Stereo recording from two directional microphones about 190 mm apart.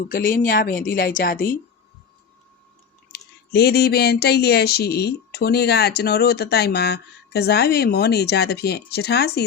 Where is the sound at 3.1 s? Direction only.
60° left (ahead or behind).